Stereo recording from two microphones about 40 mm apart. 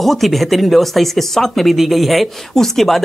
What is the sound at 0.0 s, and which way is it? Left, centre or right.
Speech, centre.